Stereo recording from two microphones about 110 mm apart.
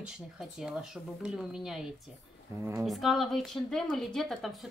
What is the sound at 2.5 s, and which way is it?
Speech, 25° right (ahead or behind).